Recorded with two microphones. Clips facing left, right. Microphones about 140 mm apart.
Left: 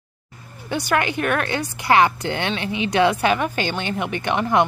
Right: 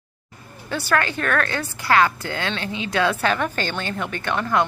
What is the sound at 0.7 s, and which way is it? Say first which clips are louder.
A woman's voice: left 1 dB; 15° left (ahead or behind).